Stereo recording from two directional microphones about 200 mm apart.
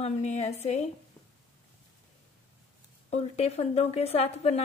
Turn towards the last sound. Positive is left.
turn(degrees=30)  # may be behind; listen again after turning